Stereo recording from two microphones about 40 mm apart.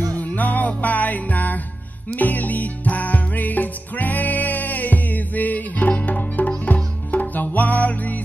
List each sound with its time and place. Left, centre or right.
0.1 s music: left